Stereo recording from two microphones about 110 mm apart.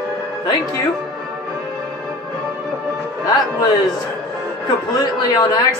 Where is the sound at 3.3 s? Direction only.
35° left (ahead or behind).